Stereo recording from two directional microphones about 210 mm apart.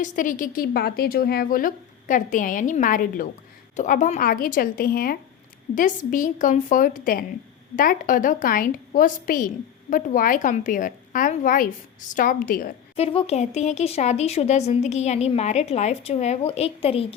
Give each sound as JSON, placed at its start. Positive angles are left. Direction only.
{"t": 0.0, "sound": "speech", "side_deg": 40}
{"t": 13.0, "sound": "speech", "side_deg": 30}